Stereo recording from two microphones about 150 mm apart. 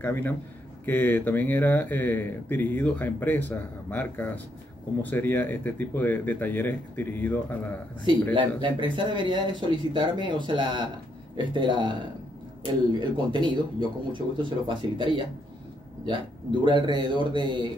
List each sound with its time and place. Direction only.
0.0 s speech: 15° left (ahead or behind)
8.0 s speech: 30° right (ahead or behind)
16.6 s speech: 30° right (ahead or behind)